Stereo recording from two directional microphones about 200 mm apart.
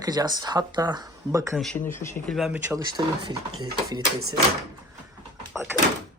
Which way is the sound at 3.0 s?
20° right (ahead or behind).